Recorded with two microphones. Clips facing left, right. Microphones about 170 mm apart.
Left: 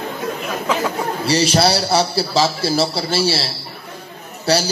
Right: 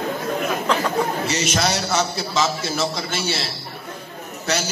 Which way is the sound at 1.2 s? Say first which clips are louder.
Left 6 dB; 35° left (ahead or behind).